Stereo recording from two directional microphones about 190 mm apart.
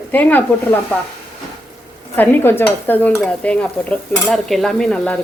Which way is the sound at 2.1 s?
10° left (ahead or behind).